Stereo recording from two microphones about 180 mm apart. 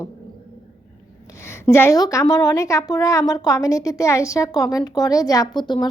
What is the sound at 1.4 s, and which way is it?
A woman's voice, 15° left (ahead or behind).